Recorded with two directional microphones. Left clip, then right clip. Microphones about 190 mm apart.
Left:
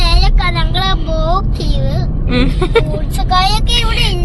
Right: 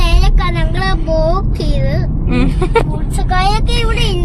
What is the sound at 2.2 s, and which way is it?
Vehicle, 10° right (ahead or behind).